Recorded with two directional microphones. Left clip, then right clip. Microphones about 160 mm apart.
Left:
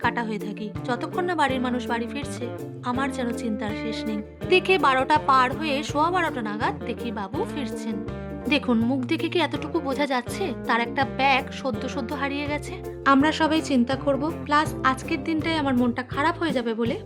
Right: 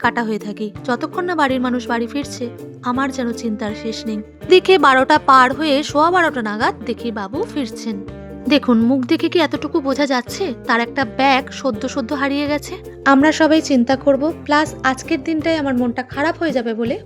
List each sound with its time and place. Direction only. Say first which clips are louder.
0.0 s a woman's voice: right 7 dB; 35° right (ahead or behind); by 17.0 s 20° right (ahead or behind)